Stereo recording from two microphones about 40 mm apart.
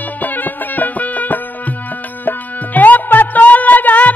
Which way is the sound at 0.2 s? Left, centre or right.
Left.